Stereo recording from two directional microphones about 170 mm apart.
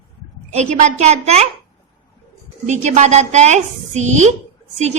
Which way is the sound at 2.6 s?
45° right (ahead or behind).